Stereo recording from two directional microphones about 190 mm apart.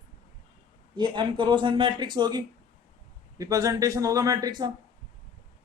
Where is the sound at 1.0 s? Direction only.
25° right (ahead or behind).